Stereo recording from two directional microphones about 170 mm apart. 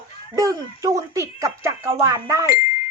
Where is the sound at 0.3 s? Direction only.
20° right (ahead or behind).